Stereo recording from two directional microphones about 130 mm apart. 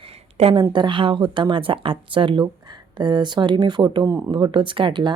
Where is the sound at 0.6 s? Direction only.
35° right (ahead or behind).